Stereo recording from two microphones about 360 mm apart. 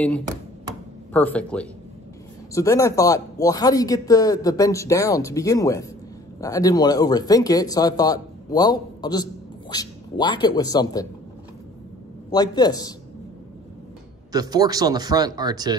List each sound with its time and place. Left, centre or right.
1.1 s speech: centre
12.3 s speech: centre
14.3 s speech: centre